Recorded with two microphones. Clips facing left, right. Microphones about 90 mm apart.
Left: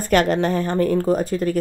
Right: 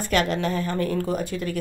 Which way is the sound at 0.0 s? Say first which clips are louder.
Left 5 dB; 45° left (ahead or behind).